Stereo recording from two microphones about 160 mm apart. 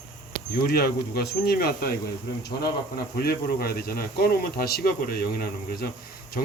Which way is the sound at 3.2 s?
70° left (ahead or behind).